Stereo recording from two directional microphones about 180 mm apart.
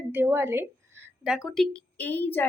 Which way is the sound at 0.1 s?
10° right (ahead or behind).